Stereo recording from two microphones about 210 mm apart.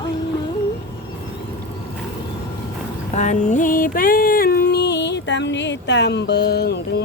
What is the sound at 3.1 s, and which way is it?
Music, 35° left (ahead or behind).